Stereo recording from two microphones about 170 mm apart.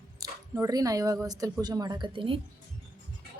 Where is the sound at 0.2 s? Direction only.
20° right (ahead or behind).